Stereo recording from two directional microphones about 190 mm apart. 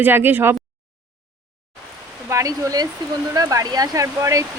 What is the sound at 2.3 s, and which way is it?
A woman's voice, 15° right (ahead or behind).